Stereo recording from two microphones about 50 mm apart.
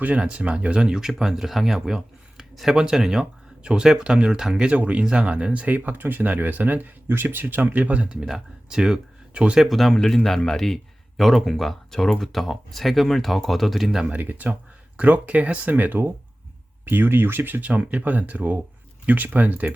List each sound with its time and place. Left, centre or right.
0.2 s speech: right
5.6 s speech: right
7.9 s speech: right
9.6 s speech: centre
14.1 s speech: right
16.8 s speech: right